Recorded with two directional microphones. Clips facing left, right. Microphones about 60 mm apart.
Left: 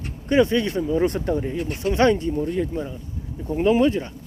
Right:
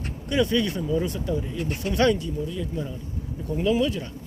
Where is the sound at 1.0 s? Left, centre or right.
Left.